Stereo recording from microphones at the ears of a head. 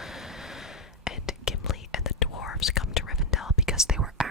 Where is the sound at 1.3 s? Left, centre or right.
Left.